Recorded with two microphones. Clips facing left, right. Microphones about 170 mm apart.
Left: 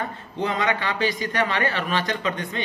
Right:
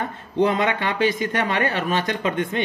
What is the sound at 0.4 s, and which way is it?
Speech, 50° right (ahead or behind).